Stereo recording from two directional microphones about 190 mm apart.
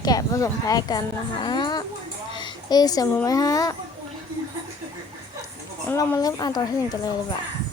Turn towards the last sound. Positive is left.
turn(degrees=20)  # may be behind; listen again after turning